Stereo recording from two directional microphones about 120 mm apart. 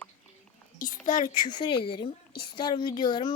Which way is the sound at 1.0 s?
90° left.